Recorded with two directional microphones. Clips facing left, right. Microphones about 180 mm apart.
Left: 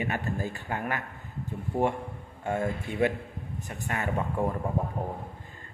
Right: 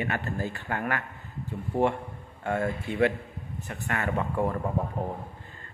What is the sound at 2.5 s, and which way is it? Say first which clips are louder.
Speech: right 1 dB; 15° left (ahead or behind).